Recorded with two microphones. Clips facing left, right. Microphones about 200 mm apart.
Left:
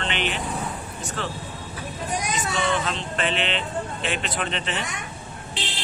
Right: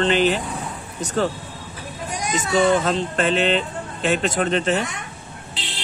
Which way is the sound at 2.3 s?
40° right (ahead or behind).